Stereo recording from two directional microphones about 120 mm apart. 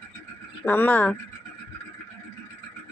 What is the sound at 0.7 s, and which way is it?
Speech, 15° left (ahead or behind).